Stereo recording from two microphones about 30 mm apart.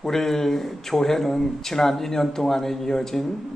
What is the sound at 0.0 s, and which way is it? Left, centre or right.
A man's voice, centre.